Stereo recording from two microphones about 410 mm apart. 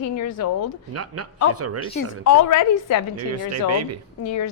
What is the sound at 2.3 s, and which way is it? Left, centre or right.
Speech, left.